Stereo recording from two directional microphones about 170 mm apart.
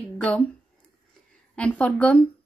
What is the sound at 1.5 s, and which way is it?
Speech, 10° left (ahead or behind).